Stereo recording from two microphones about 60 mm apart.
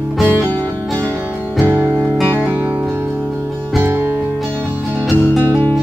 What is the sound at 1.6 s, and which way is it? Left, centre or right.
Music, right.